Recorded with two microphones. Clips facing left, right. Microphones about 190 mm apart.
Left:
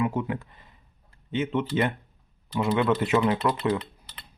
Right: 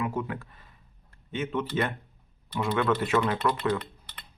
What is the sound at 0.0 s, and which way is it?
Speech, 20° left (ahead or behind).